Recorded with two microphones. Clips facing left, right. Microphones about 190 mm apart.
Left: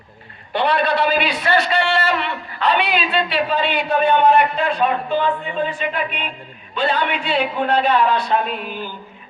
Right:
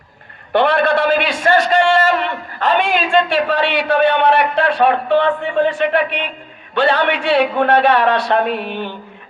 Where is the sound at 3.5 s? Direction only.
75° right (ahead or behind).